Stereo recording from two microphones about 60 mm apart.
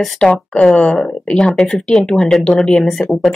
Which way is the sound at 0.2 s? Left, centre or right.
Centre.